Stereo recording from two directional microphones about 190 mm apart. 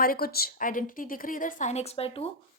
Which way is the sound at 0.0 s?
50° left (ahead or behind).